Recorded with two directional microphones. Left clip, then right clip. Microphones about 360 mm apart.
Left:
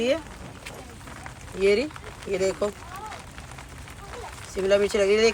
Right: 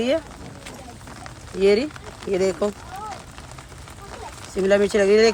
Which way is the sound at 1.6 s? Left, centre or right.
Right.